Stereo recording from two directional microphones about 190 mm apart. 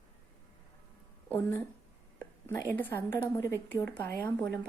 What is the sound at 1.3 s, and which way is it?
A woman's voice, 10° left (ahead or behind).